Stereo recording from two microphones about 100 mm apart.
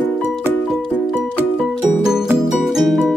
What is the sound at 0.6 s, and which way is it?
Music, 5° right (ahead or behind).